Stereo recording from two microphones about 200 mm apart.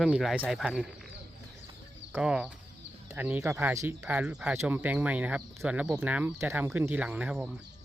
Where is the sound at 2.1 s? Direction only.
5° right (ahead or behind).